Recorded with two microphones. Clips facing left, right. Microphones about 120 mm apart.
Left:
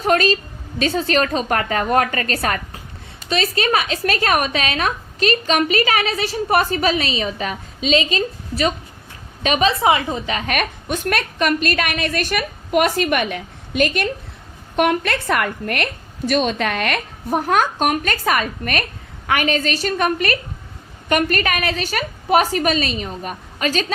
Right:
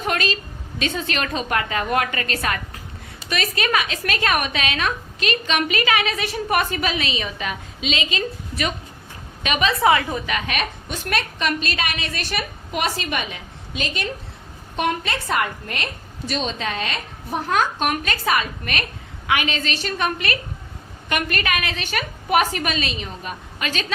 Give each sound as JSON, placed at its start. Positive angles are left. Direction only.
{"t": 0.0, "sound": "a woman's voice", "side_deg": 40}
{"t": 9.8, "sound": "a woman's voice", "side_deg": 20}
{"t": 10.4, "sound": "a woman's voice", "side_deg": 50}